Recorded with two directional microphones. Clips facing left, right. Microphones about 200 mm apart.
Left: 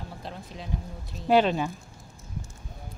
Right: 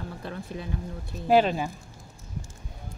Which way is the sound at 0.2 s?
55° right (ahead or behind).